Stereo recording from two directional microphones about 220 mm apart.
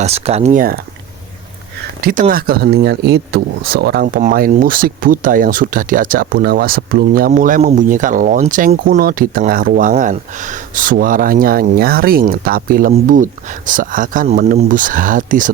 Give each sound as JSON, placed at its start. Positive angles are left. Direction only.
{"t": 0.0, "sound": "speech", "side_deg": -30}
{"t": 2.0, "sound": "speech", "side_deg": -40}